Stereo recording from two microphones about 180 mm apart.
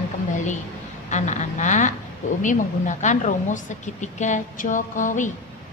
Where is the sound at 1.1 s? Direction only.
40° left (ahead or behind).